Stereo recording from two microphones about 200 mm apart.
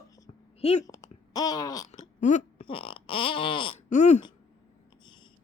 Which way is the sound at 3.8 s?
35° left (ahead or behind).